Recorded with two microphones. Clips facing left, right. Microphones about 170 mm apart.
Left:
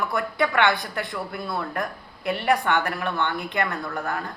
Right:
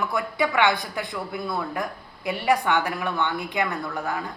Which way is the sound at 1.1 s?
Centre (ahead or behind).